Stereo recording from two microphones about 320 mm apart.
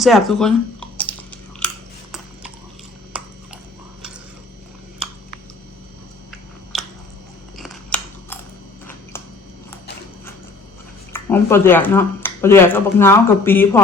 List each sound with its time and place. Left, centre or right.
0.0 s chewing: centre
6.7 s a sound: centre
7.5 s scissors: centre
11.1 s speech: centre